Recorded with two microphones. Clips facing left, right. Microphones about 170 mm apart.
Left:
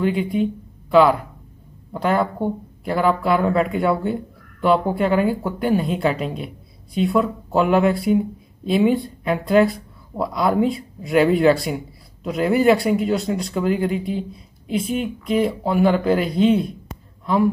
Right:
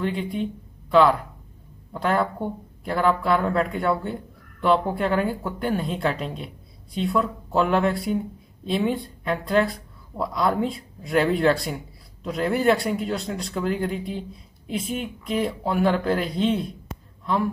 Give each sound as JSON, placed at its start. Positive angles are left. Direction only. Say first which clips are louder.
{"t": 0.0, "sound": "speech", "louder": "left 6 dB", "side_deg": 5}